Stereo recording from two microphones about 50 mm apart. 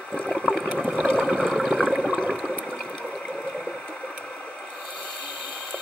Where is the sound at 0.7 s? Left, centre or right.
Centre.